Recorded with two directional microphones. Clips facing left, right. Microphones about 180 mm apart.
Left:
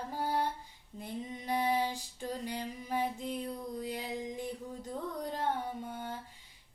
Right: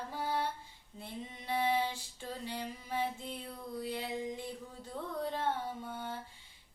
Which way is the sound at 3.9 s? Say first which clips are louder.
Even; 40° left (ahead or behind).